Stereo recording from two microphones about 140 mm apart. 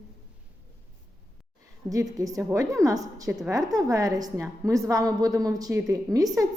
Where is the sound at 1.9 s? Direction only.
25° right (ahead or behind).